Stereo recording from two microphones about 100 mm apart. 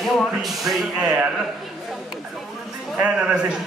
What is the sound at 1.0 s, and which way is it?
Speech, 10° right (ahead or behind).